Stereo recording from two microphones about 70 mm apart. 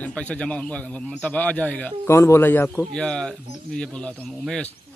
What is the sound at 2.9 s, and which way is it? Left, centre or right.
Speech, centre.